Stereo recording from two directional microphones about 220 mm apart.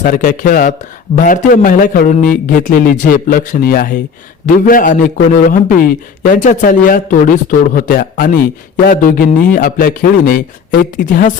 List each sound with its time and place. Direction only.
0.0 s a man's voice: 35° left (ahead or behind)